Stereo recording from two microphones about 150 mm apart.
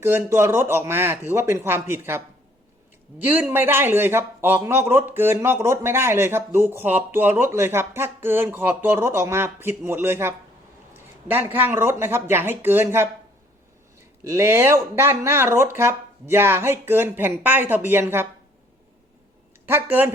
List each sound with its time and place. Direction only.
0.0 s a man's voice: 15° right (ahead or behind)
14.3 s a man's voice: 15° right (ahead or behind)
19.6 s a man's voice: 15° right (ahead or behind)